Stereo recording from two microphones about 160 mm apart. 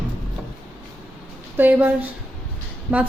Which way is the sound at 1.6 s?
10° right (ahead or behind).